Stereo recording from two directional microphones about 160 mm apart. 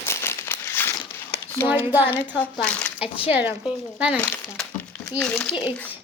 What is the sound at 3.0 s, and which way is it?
Speech, 35° left (ahead or behind).